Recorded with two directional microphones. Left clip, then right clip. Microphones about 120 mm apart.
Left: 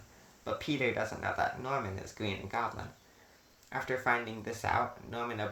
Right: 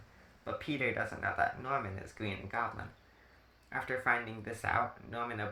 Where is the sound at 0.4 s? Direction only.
40° left (ahead or behind).